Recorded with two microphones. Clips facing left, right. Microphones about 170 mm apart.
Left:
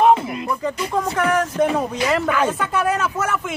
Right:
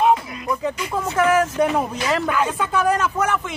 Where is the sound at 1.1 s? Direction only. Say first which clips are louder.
Right 5 dB; 5° right (ahead or behind).